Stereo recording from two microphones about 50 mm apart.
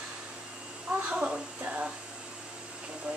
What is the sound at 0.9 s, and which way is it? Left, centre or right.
Speech, right.